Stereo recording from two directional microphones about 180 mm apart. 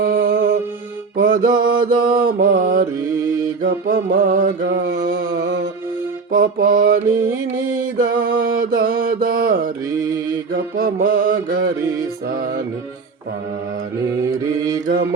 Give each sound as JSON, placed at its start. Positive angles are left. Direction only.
{"t": 0.0, "sound": "music", "side_deg": -55}
{"t": 1.1, "sound": "mantra", "side_deg": -50}
{"t": 6.3, "sound": "music", "side_deg": -55}
{"t": 7.2, "sound": "music", "side_deg": -10}
{"t": 8.1, "sound": "mantra", "side_deg": -55}
{"t": 14.2, "sound": "mantra", "side_deg": -20}